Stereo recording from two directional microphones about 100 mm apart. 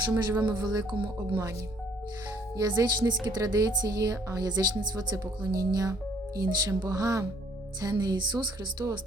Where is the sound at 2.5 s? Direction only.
40° right (ahead or behind).